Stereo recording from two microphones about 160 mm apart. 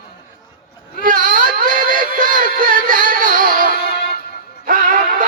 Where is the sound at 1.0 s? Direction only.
60° right (ahead or behind).